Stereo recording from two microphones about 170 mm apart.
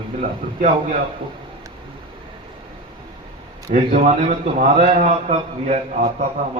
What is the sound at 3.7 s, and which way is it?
A man's voice, 50° right (ahead or behind).